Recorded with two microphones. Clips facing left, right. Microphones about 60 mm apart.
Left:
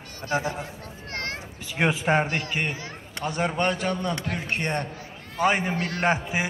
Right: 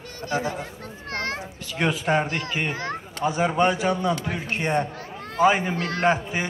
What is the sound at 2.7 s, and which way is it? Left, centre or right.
Speech, right.